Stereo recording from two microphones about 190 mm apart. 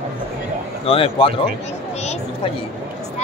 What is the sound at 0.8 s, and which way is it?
Speech, 30° left (ahead or behind).